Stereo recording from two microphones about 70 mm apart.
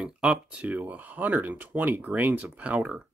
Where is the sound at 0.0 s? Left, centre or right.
Centre.